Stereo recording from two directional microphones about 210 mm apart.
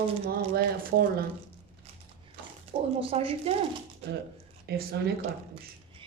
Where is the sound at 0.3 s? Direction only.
45° right (ahead or behind).